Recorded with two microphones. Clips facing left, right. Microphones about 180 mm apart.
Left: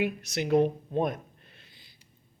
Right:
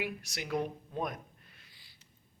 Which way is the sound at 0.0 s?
20° left (ahead or behind).